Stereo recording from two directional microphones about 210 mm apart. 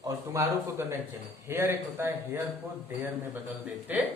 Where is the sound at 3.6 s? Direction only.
10° right (ahead or behind).